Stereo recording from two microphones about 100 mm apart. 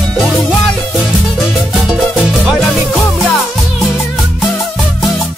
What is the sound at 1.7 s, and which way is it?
Music, 5° right (ahead or behind).